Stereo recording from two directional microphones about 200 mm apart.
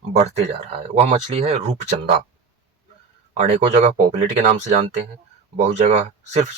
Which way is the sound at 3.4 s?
35° right (ahead or behind).